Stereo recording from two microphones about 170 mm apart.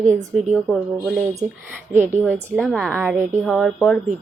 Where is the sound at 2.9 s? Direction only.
15° right (ahead or behind).